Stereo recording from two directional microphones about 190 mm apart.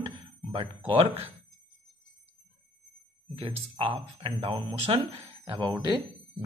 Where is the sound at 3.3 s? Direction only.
30° right (ahead or behind).